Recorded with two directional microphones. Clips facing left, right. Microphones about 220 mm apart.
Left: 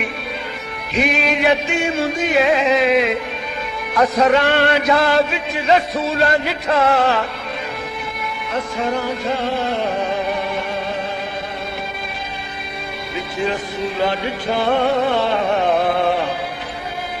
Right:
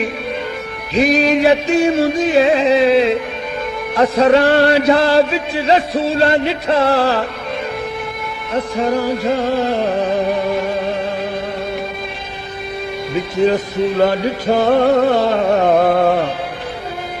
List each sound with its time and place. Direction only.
0.9 s music: 35° right (ahead or behind)
4.2 s music: 35° right (ahead or behind)
8.5 s music: 35° right (ahead or behind)
13.1 s music: 40° right (ahead or behind)